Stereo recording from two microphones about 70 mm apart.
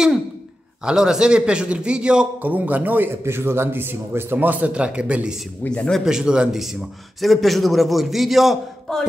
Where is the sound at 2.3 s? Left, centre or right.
Right.